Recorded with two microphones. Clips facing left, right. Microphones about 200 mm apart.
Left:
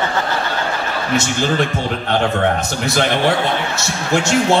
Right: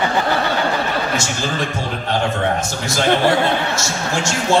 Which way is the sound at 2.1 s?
60° left (ahead or behind).